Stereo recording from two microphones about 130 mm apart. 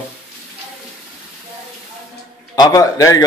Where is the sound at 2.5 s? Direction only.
30° left (ahead or behind).